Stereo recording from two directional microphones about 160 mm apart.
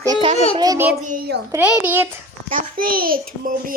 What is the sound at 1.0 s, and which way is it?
Speech, 55° right (ahead or behind).